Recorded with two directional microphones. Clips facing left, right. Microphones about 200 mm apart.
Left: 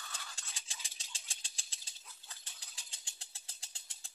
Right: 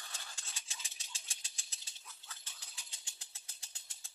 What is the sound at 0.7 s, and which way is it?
Engine, 30° left (ahead or behind).